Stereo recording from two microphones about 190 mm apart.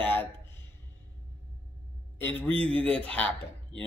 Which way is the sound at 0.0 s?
10° left (ahead or behind).